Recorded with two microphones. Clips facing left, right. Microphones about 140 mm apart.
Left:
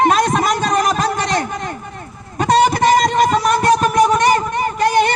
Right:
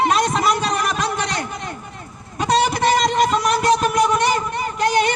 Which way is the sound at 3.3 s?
45° left (ahead or behind).